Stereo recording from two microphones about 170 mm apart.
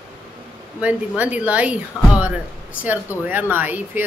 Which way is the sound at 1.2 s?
10° right (ahead or behind).